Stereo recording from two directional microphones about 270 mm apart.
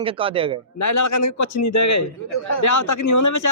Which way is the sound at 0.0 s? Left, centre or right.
Centre.